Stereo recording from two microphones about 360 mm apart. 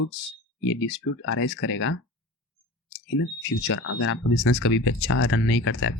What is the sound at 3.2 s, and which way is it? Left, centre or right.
Speech, left.